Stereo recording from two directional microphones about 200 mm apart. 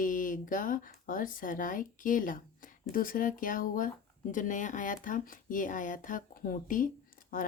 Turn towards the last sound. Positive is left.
turn(degrees=45)  # may be behind; listen again after turning